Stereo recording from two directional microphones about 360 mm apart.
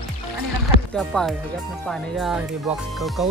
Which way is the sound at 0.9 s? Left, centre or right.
Centre.